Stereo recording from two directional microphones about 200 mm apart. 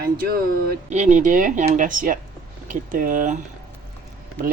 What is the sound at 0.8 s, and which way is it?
Speech, 35° right (ahead or behind).